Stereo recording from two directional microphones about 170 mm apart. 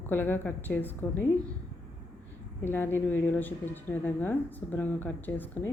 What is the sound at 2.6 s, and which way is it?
Speech, 15° left (ahead or behind).